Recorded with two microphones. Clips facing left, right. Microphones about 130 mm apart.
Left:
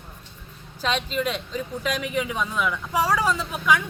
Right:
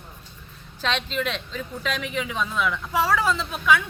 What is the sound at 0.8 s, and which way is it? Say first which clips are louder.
A woman's voice: left 1 dB; 10° left (ahead or behind).